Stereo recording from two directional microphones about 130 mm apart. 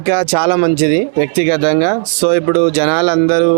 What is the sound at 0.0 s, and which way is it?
Speech, 15° right (ahead or behind).